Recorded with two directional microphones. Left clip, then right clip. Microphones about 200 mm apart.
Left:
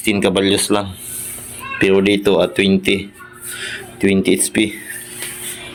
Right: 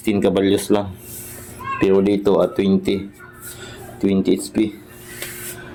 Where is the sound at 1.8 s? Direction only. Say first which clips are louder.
Left 3 dB; centre (ahead or behind).